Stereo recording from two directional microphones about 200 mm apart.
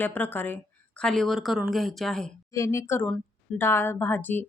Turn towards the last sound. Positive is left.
turn(degrees=10)  # may be behind; listen again after turning